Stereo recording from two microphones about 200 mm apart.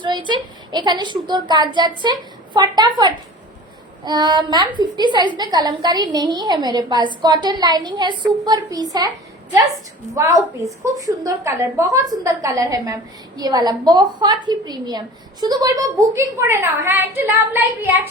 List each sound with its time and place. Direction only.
0.0 s a woman's voice: 25° right (ahead or behind)
4.0 s a woman's voice: 20° right (ahead or behind)